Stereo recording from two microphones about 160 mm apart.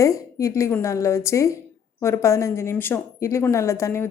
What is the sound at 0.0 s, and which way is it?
A woman's voice, 20° left (ahead or behind).